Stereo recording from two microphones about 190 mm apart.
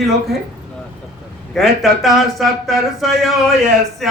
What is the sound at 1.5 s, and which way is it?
Speech, centre (ahead or behind).